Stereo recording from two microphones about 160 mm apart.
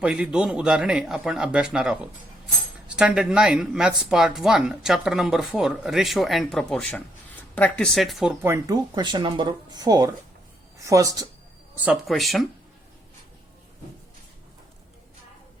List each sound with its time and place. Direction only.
0.0 s speech: 5° right (ahead or behind)
8.4 s a woman's voice: 15° right (ahead or behind)
11.9 s speech: centre (ahead or behind)